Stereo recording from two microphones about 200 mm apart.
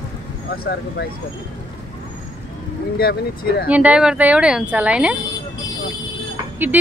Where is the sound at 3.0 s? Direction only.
50° left (ahead or behind).